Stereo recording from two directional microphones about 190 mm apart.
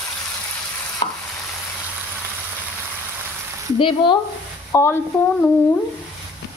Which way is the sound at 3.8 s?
25° left (ahead or behind).